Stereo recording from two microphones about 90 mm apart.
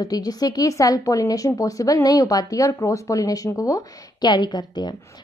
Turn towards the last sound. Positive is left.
turn(degrees=50)  # may be behind; listen again after turning